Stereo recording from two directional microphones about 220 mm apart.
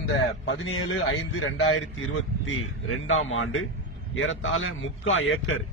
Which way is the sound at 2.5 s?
65° left (ahead or behind).